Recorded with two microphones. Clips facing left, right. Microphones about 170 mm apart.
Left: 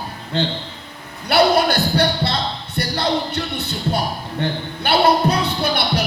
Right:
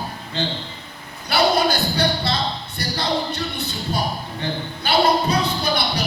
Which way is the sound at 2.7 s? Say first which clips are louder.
Left 4 dB; 60° left (ahead or behind).